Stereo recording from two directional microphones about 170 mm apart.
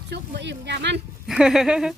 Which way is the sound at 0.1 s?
90° right.